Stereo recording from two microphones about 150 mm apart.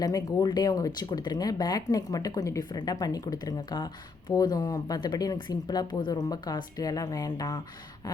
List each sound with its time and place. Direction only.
0.0 s speech: 25° left (ahead or behind)